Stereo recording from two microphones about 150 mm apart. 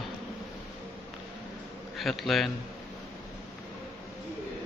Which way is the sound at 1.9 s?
Centre (ahead or behind).